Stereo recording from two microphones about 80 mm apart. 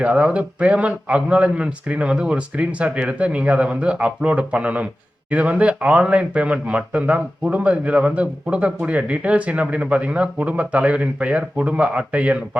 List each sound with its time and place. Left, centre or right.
0.0 s speech: centre